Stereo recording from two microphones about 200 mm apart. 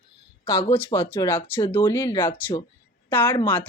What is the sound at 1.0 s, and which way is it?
Speech, 10° left (ahead or behind).